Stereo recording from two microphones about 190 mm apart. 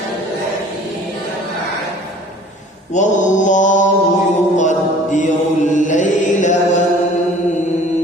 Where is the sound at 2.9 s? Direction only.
40° left (ahead or behind).